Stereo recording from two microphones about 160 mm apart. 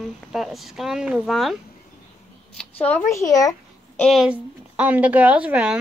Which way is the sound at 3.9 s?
Centre (ahead or behind).